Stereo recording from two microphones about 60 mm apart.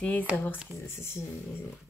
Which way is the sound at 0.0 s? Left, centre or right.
Left.